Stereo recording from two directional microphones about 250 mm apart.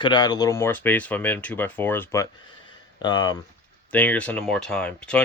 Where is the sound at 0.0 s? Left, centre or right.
Centre.